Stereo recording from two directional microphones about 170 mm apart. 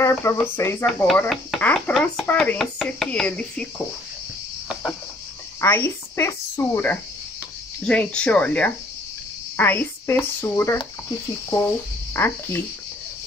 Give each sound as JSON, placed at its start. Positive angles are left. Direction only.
{"t": 0.0, "sound": "speech", "side_deg": 15}
{"t": 1.3, "sound": "chopping", "side_deg": 5}
{"t": 5.6, "sound": "a woman's voice", "side_deg": 15}